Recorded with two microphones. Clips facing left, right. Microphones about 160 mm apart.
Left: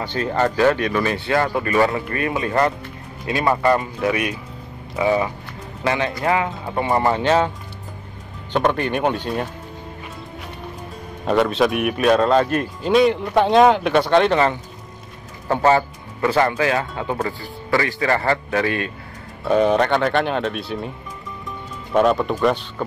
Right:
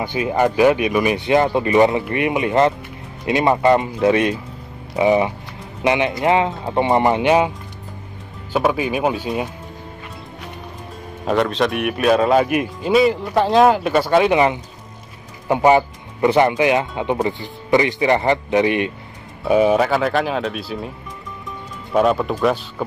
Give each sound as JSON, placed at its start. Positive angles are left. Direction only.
{"t": 0.0, "sound": "speech", "side_deg": -15}
{"t": 8.5, "sound": "speech", "side_deg": -5}
{"t": 11.2, "sound": "speech", "side_deg": 0}
{"t": 19.4, "sound": "speech", "side_deg": -5}